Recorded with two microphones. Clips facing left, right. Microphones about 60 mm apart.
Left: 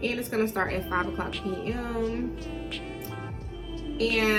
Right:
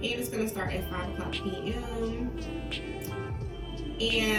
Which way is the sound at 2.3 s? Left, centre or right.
Centre.